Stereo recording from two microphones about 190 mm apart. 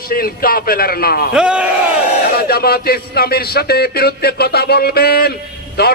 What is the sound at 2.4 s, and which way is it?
A man's voice, 55° left (ahead or behind).